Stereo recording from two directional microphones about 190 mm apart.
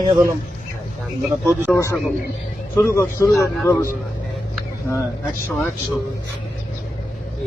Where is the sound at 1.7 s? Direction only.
15° left (ahead or behind).